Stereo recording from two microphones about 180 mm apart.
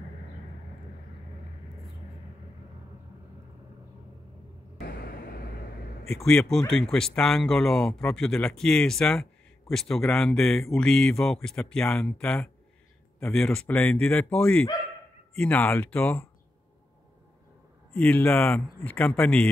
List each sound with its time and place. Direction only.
4.7 s vehicle: 60° left (ahead or behind)
6.2 s a man's voice: 5° left (ahead or behind)
17.9 s a man's voice: 10° left (ahead or behind)